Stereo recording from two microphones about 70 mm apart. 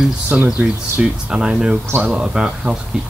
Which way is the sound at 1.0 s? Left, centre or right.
Centre.